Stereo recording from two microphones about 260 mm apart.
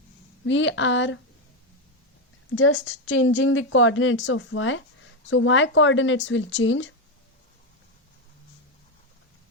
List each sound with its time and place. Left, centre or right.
0.4 s a woman's voice: left
2.6 s a woman's voice: left